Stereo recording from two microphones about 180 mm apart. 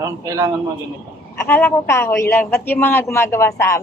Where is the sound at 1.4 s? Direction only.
10° left (ahead or behind).